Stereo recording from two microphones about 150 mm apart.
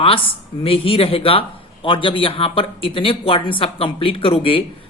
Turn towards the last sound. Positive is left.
turn(degrees=35)  # may be behind; listen again after turning